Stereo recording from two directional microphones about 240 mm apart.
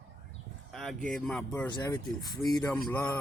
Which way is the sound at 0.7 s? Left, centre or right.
Centre.